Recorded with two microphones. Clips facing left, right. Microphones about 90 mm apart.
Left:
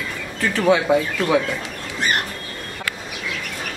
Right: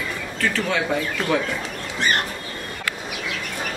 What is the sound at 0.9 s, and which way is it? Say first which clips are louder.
Speech: left 6 dB; 15° left (ahead or behind).